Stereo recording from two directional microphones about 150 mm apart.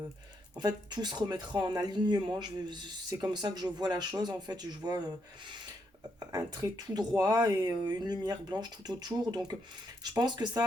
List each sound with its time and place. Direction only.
0.5 s speech: 30° right (ahead or behind)
6.1 s speech: 25° right (ahead or behind)